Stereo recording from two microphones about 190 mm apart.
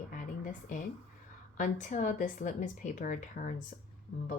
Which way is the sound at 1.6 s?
40° left (ahead or behind).